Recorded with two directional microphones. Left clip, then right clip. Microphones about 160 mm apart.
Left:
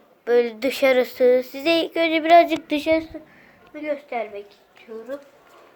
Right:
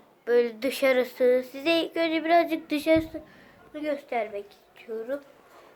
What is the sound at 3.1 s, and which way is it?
A woman's voice, centre (ahead or behind).